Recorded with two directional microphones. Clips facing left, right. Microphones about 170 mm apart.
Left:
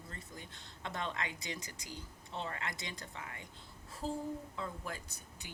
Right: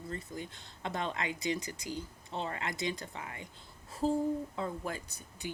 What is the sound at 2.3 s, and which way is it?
Speech, 25° right (ahead or behind).